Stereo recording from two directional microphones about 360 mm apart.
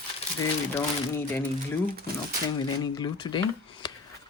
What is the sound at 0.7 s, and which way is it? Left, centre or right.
Speech, centre.